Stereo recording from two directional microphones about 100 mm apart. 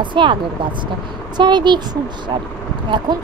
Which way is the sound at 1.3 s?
50° right (ahead or behind).